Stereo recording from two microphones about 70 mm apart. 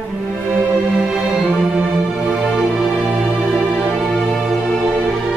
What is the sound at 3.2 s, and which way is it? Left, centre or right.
Music, centre.